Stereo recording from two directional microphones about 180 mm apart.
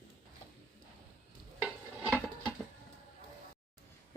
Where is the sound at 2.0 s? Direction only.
5° left (ahead or behind).